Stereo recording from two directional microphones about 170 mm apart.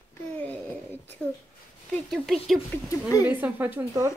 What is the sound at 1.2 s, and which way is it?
Speech, 5° left (ahead or behind).